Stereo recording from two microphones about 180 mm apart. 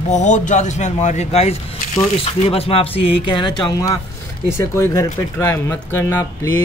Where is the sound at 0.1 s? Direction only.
40° left (ahead or behind).